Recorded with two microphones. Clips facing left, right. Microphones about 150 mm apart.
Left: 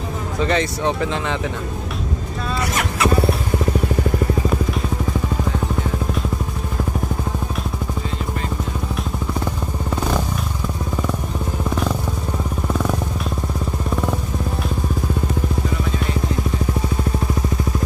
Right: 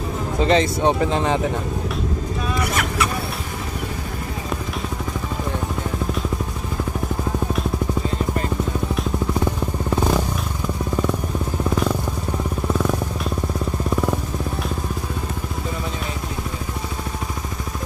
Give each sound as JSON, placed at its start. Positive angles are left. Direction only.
{"t": 0.4, "sound": "speech", "side_deg": -30}